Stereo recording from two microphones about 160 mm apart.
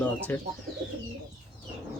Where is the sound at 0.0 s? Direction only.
10° left (ahead or behind).